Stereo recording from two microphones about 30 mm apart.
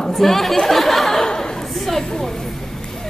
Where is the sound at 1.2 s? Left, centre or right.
Left.